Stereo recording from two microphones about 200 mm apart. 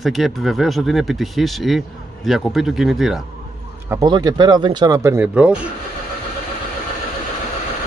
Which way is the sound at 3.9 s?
20° right (ahead or behind).